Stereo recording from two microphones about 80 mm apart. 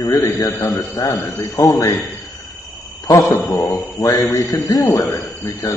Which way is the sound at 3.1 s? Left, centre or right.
Left.